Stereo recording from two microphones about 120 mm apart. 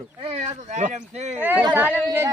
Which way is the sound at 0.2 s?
60° right (ahead or behind).